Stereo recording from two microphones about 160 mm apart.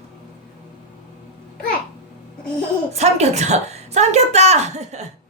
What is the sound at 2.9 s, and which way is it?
A woman's voice, 40° right (ahead or behind).